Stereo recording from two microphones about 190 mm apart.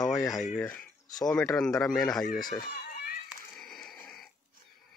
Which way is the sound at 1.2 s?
5° left (ahead or behind).